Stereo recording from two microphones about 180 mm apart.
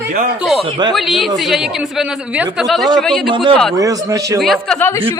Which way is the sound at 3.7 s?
20° right (ahead or behind).